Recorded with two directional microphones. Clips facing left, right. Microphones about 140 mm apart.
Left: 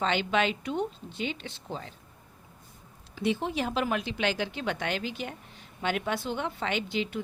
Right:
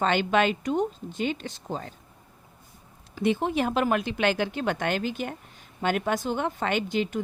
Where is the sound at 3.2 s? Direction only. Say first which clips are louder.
Right 4 dB; 50° right (ahead or behind).